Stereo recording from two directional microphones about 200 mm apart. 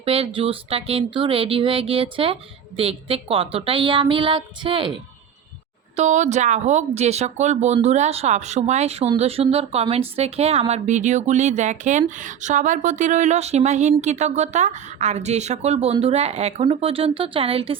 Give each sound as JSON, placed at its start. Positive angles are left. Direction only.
{"t": 0.0, "sound": "speech", "side_deg": -30}
{"t": 6.0, "sound": "speech", "side_deg": -35}